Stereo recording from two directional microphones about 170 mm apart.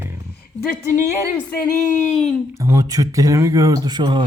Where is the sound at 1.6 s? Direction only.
50° left (ahead or behind).